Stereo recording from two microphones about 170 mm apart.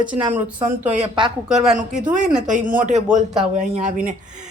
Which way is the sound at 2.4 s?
50° right (ahead or behind).